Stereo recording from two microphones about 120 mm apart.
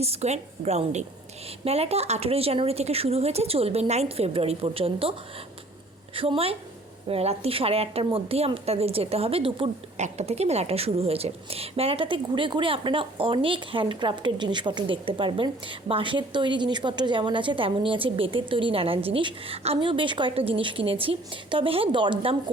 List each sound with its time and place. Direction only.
0.0 s speech: 60° right (ahead or behind)
6.1 s a woman's voice: 50° right (ahead or behind)
10.0 s a woman's voice: 65° right (ahead or behind); by 22.5 s 45° right (ahead or behind)